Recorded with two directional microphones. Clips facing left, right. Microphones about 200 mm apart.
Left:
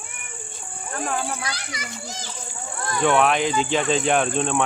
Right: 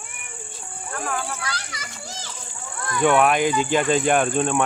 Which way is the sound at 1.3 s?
15° left (ahead or behind).